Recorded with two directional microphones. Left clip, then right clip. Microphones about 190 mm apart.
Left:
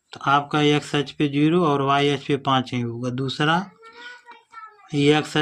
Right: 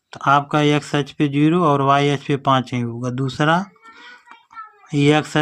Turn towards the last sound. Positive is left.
turn(degrees=-35)  # may be behind; listen again after turning